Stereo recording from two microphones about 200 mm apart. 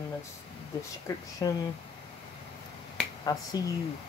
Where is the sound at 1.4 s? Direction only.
15° left (ahead or behind).